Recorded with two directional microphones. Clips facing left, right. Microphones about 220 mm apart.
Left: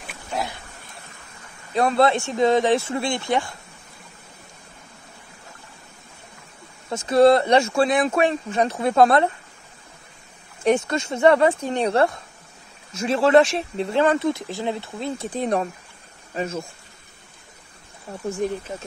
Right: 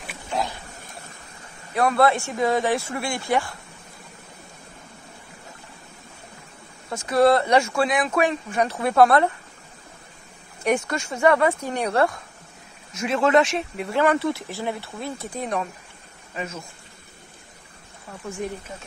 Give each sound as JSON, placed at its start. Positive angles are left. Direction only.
{"t": 0.0, "sound": "a sound", "side_deg": 0}
{"t": 1.7, "sound": "a man's voice", "side_deg": 25}
{"t": 6.9, "sound": "speech", "side_deg": 25}
{"t": 10.6, "sound": "speech", "side_deg": 25}
{"t": 15.3, "sound": "speech", "side_deg": 35}